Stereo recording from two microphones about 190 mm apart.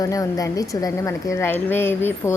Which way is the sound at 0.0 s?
20° left (ahead or behind).